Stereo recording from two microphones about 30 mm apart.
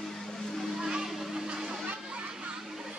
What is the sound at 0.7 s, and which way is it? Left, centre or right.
Music, right.